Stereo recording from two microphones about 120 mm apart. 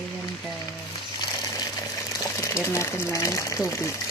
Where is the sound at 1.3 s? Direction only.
30° left (ahead or behind).